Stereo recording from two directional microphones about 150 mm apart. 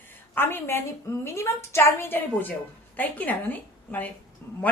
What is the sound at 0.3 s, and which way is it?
A woman's voice, 15° left (ahead or behind).